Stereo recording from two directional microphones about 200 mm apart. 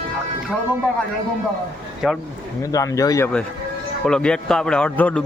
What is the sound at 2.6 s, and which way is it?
Speech, 15° left (ahead or behind).